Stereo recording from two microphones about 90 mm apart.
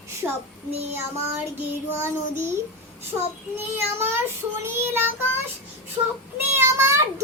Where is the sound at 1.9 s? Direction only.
25° right (ahead or behind).